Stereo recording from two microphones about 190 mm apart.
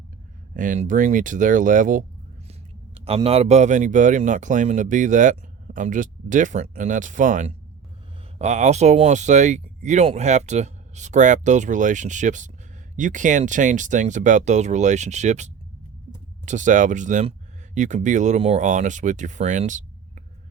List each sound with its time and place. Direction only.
0.5 s speech: 45° right (ahead or behind)
2.5 s speech: 30° right (ahead or behind)
16.5 s speech: 40° right (ahead or behind)